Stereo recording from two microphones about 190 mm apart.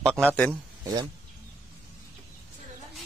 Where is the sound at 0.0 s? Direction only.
5° left (ahead or behind).